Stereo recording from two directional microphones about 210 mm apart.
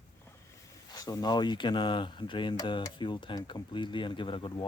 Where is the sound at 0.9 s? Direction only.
20° left (ahead or behind).